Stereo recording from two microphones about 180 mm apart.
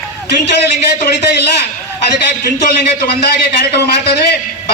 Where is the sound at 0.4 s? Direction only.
70° left (ahead or behind).